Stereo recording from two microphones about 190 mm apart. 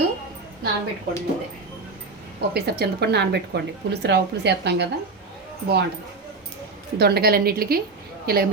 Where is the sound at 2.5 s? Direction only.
60° right (ahead or behind).